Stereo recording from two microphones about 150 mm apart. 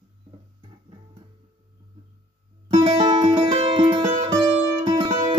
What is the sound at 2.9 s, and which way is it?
Music, 40° right (ahead or behind).